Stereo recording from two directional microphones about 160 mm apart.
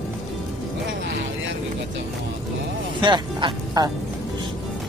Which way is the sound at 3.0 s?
30° right (ahead or behind).